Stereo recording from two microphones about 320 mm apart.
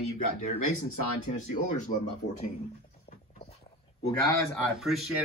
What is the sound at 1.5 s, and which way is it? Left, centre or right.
Speech, left.